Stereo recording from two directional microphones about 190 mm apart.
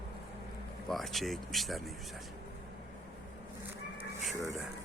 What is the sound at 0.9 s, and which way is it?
Speech, centre (ahead or behind).